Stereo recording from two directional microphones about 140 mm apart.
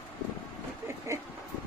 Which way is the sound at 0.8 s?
20° right (ahead or behind).